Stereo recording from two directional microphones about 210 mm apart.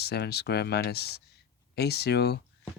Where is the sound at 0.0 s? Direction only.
50° left (ahead or behind).